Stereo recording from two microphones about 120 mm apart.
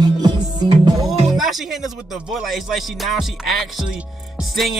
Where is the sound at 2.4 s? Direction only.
Centre (ahead or behind).